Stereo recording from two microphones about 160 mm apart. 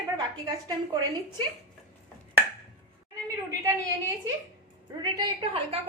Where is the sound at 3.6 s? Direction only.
20° right (ahead or behind).